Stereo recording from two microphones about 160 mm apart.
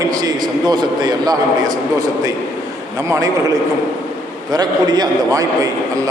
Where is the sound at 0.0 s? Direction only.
25° right (ahead or behind).